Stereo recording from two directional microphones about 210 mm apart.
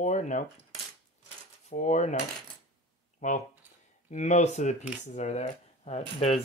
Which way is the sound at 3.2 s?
35° left (ahead or behind).